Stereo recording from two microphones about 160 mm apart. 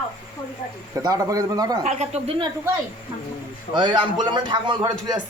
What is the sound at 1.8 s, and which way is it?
Speech, 40° right (ahead or behind).